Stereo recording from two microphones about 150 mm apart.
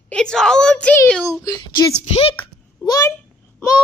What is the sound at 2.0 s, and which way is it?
Speech, 45° left (ahead or behind).